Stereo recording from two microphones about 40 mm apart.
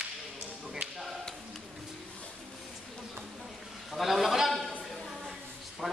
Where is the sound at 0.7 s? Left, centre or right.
Centre.